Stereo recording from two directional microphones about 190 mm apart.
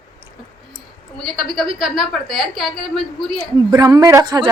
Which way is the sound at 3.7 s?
20° right (ahead or behind).